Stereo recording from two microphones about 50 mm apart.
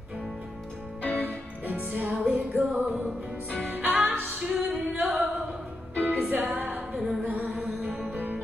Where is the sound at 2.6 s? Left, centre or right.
Right.